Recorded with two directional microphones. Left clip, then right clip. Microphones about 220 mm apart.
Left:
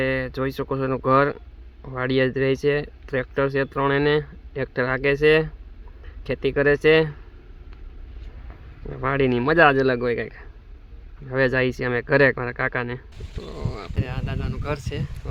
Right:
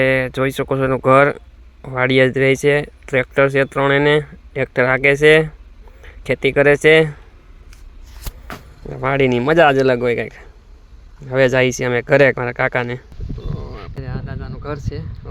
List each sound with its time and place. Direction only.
0.0 s speech: 20° right (ahead or behind)
8.9 s speech: 15° right (ahead or behind)
13.4 s speech: 5° right (ahead or behind)